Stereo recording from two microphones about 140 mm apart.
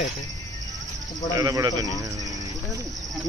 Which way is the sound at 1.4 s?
25° right (ahead or behind).